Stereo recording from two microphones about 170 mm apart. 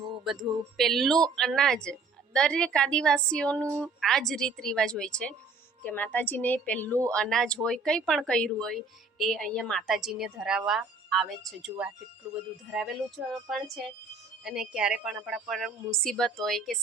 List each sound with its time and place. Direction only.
0.3 s a woman's voice: centre (ahead or behind)